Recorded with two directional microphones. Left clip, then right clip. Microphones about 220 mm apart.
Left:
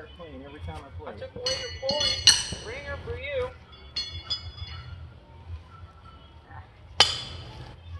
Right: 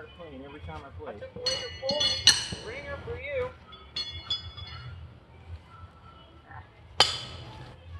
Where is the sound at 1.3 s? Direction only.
45° left (ahead or behind).